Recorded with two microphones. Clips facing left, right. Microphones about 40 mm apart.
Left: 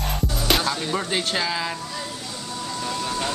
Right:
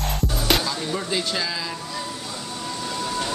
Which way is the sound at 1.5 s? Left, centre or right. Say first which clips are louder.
Left 3 dB; left.